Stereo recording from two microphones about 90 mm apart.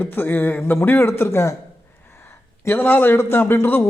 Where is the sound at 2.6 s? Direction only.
25° left (ahead or behind).